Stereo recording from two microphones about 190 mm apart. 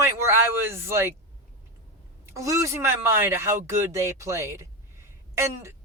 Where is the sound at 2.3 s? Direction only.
15° right (ahead or behind).